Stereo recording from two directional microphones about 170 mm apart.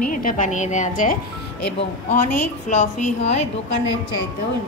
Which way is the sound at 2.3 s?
45° left (ahead or behind).